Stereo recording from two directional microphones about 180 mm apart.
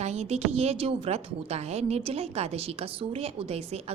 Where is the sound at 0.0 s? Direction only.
40° right (ahead or behind).